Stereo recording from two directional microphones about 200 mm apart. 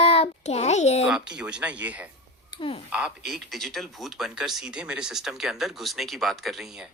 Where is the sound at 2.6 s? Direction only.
25° left (ahead or behind).